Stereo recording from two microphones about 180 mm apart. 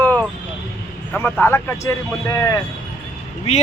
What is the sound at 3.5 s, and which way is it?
Speech, 40° left (ahead or behind).